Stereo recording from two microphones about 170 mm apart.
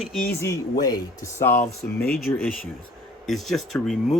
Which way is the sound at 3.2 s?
Centre (ahead or behind).